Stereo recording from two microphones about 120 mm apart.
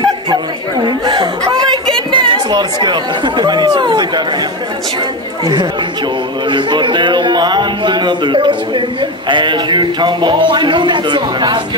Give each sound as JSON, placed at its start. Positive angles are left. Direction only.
{"t": 0.8, "sound": "chuckle", "side_deg": -35}
{"t": 2.1, "sound": "speech", "side_deg": -40}
{"t": 6.5, "sound": "speech", "side_deg": -40}